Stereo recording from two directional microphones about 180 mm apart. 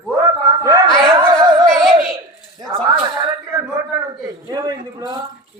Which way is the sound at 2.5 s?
20° right (ahead or behind).